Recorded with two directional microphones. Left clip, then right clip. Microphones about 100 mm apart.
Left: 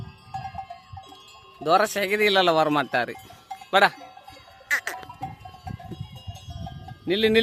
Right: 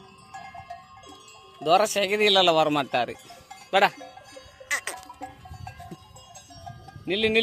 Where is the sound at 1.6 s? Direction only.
45° left (ahead or behind).